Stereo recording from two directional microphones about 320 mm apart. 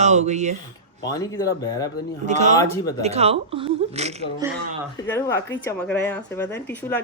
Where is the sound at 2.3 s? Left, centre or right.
Right.